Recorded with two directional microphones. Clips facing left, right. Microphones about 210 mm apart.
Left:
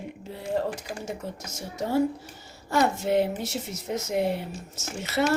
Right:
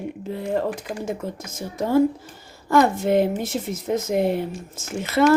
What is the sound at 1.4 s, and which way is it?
Speech, 90° right.